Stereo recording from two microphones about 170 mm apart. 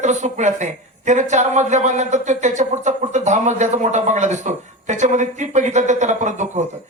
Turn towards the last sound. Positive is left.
turn(degrees=-45)  # may be behind; listen again after turning